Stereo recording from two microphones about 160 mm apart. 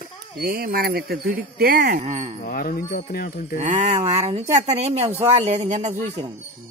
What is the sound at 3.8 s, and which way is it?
Speech, 40° right (ahead or behind).